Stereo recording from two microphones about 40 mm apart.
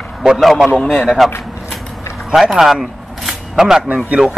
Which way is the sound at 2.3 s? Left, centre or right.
Centre.